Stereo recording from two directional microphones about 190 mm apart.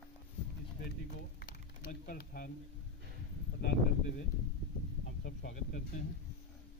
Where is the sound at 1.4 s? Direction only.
50° left (ahead or behind).